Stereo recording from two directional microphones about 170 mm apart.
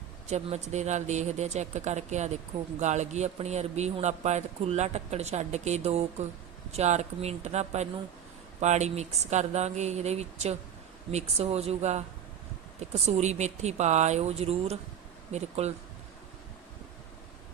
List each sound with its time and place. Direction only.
0.3 s speech: 40° right (ahead or behind)